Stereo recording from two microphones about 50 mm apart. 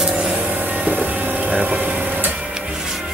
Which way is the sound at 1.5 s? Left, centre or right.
Right.